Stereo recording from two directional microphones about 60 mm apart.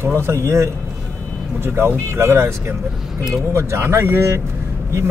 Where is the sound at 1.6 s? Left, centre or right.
Right.